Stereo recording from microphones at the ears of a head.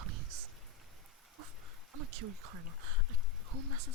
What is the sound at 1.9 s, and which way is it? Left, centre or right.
Speech, right.